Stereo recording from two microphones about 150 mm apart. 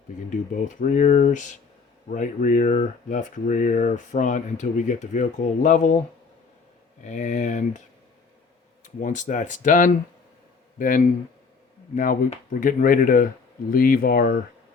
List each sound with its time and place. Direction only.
0.3 s speech: 60° left (ahead or behind)
7.0 s speech: 55° left (ahead or behind)
8.8 s a man's voice: 60° left (ahead or behind)
12.5 s speech: 65° left (ahead or behind); by 14.3 s 80° left